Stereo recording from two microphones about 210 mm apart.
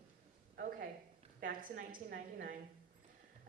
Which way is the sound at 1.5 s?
40° right (ahead or behind).